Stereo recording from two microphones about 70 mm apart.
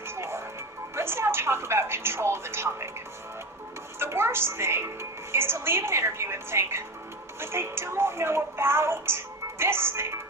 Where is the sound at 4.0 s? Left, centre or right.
Right.